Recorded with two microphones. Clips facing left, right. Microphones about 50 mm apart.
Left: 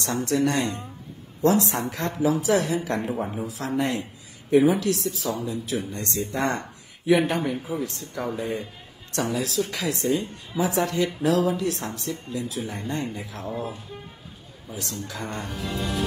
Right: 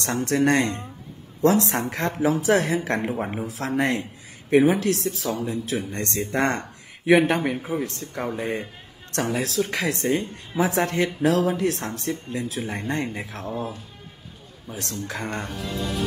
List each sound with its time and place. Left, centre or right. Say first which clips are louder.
0.0 s speech: right 2 dB; right
7.3 s speech: right 2 dB; right
14.8 s speech: right 3 dB; right